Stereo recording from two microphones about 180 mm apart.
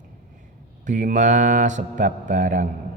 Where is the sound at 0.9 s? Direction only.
45° right (ahead or behind).